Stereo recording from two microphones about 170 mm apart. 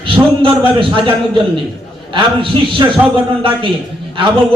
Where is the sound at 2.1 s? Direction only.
30° right (ahead or behind).